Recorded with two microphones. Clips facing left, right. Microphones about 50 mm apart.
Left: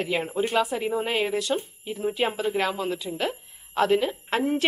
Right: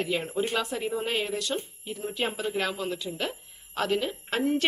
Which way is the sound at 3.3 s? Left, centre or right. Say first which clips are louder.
Left 6 dB; centre.